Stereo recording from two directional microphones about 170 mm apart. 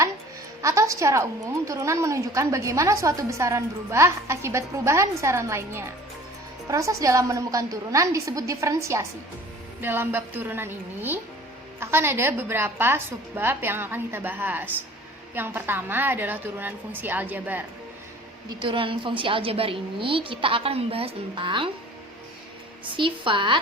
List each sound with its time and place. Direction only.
0.6 s a woman's voice: 20° right (ahead or behind)
18.6 s a woman's voice: 30° right (ahead or behind)
22.9 s a woman's voice: 30° right (ahead or behind)